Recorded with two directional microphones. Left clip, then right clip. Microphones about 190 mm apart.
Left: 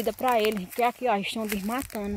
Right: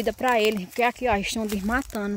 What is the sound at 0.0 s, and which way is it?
Speech, 15° right (ahead or behind).